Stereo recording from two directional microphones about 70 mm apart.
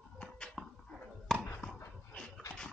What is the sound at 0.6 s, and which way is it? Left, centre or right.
Dog, centre.